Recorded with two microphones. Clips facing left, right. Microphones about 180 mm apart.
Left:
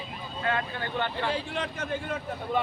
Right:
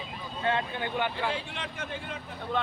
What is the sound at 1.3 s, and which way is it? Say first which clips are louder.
Speech: left 4 dB; 40° left (ahead or behind).